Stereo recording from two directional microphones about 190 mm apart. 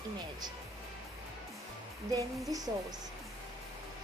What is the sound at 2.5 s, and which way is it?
Speech, 20° right (ahead or behind).